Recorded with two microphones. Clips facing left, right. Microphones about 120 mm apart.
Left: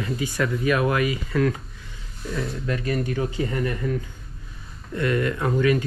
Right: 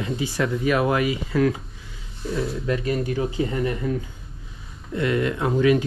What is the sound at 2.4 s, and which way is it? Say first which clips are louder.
Speech: right 2 dB; 5° right (ahead or behind).